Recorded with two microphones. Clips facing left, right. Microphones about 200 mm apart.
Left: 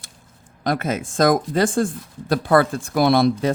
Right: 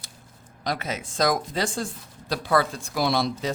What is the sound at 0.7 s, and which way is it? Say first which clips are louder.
Speech: left 7 dB; 50° left (ahead or behind).